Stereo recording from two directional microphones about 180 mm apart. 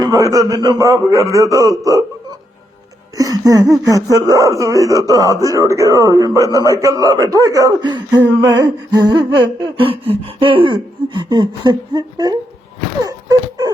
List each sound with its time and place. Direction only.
0.0 s speech: 20° right (ahead or behind)
3.2 s speech: 20° right (ahead or behind)
13.1 s a sound: 20° right (ahead or behind)